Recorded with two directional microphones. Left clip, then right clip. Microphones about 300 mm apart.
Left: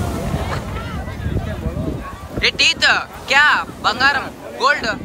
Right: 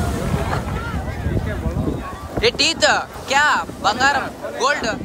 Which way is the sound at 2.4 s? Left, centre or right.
Centre.